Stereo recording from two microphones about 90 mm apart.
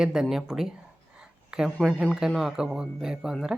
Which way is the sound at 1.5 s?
10° right (ahead or behind).